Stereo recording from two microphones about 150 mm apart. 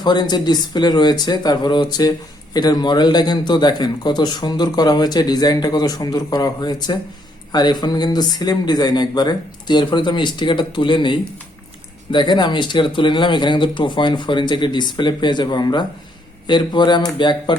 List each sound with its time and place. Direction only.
0.0 s speech: 30° left (ahead or behind)